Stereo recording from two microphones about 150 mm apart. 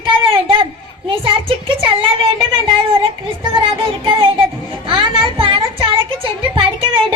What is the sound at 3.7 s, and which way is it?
Music, 35° right (ahead or behind).